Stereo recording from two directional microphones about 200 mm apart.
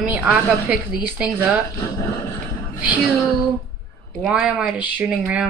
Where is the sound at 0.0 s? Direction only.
5° right (ahead or behind).